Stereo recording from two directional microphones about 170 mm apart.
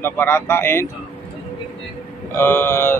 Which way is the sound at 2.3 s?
15° left (ahead or behind).